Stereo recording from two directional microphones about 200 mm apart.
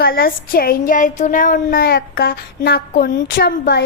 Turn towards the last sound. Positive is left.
turn(degrees=50)  # may be behind; listen again after turning